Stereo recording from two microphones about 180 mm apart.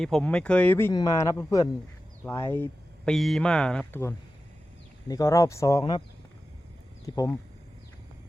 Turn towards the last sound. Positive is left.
turn(degrees=20)  # may be behind; listen again after turning